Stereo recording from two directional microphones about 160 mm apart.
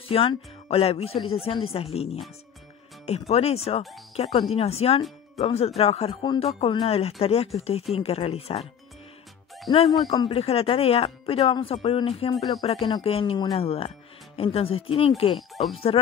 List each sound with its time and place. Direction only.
0.1 s speech: 35° left (ahead or behind)
9.7 s speech: 25° left (ahead or behind)
15.3 s speech: centre (ahead or behind)